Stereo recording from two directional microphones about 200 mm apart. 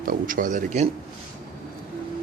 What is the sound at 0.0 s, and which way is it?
Speech, 45° right (ahead or behind).